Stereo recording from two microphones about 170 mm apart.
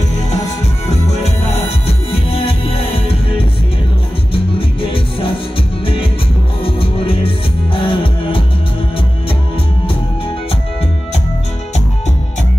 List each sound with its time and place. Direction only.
0.8 s music: 40° left (ahead or behind)
4.3 s music: 30° left (ahead or behind)
6.6 s music: 30° left (ahead or behind)